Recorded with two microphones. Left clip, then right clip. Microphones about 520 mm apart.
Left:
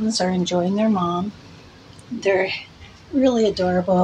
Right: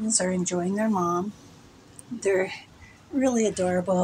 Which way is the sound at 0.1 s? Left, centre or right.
Right.